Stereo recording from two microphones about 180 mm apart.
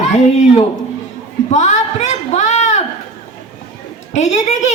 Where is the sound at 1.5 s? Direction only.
40° left (ahead or behind).